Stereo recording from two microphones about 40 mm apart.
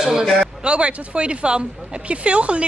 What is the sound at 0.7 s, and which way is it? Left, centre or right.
Speech, right.